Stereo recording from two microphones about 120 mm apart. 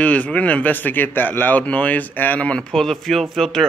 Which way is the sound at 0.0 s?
10° left (ahead or behind).